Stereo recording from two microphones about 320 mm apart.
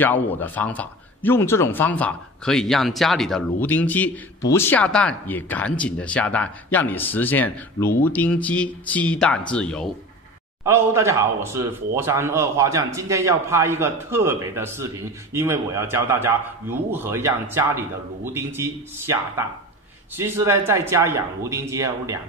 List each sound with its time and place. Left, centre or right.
0.0 s speech: centre
10.6 s speech: centre